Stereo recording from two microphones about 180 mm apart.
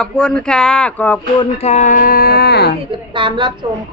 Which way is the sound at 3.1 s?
25° right (ahead or behind).